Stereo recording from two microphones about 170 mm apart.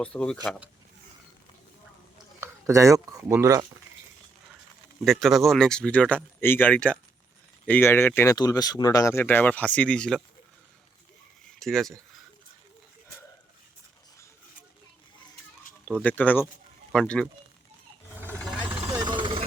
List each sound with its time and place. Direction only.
0.0 s speech: 5° left (ahead or behind)
2.4 s speech: 15° right (ahead or behind)
5.0 s speech: centre (ahead or behind)
11.6 s speech: centre (ahead or behind)
15.9 s speech: 10° left (ahead or behind)
18.9 s vehicle: 25° right (ahead or behind)